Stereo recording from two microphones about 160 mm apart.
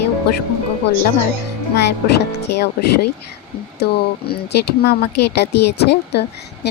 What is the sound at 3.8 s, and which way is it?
Speech, 90° left.